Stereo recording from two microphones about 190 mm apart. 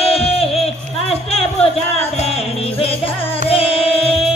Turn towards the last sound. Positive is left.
turn(degrees=30)  # may be behind; listen again after turning